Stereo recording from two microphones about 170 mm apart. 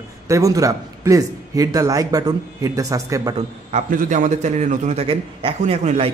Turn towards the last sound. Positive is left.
turn(degrees=-40)  # may be behind; listen again after turning